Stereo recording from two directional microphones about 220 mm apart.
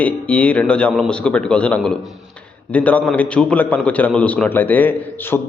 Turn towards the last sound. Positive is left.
turn(degrees=10)  # may be behind; listen again after turning